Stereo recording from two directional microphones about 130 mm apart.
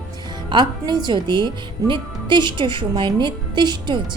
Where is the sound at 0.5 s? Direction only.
35° right (ahead or behind).